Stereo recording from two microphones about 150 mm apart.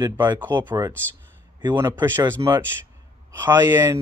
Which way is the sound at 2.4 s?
30° right (ahead or behind).